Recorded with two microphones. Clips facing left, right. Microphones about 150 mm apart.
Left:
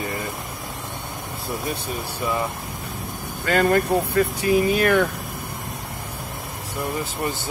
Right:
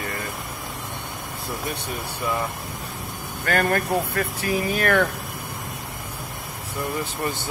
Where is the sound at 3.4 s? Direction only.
25° left (ahead or behind).